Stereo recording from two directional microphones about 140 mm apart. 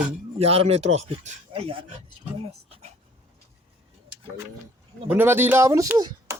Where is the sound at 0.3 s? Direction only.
45° right (ahead or behind).